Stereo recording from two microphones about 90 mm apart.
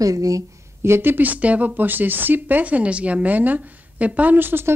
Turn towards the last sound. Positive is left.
turn(degrees=-25)  # may be behind; listen again after turning